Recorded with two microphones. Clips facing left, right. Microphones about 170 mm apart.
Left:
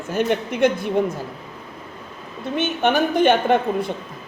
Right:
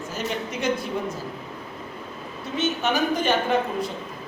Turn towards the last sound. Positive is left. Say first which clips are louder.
# left 5 dB
turn(degrees=55)  # may be behind; listen again after turning